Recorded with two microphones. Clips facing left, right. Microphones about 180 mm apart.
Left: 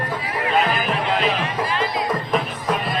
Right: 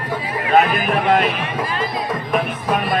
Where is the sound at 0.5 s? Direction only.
55° right (ahead or behind).